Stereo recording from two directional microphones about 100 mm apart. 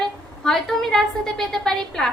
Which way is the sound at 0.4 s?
5° left (ahead or behind).